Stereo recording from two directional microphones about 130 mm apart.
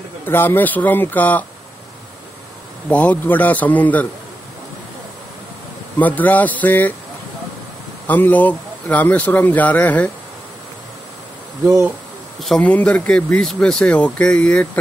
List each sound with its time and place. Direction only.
0.3 s speech: 15° left (ahead or behind)
2.9 s speech: 10° left (ahead or behind)
5.9 s speech: 10° left (ahead or behind)
8.1 s speech: 10° left (ahead or behind)
11.6 s speech: 20° right (ahead or behind)
12.4 s speech: centre (ahead or behind)